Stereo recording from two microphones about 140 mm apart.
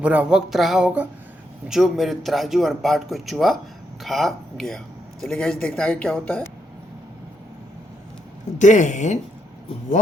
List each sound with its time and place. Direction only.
0.0 s a sound: 10° right (ahead or behind)
1.6 s a man's voice: centre (ahead or behind); by 6.5 s 15° left (ahead or behind)
8.5 s speech: 60° left (ahead or behind)